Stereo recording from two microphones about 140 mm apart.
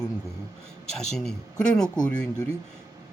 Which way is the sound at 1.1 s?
5° left (ahead or behind).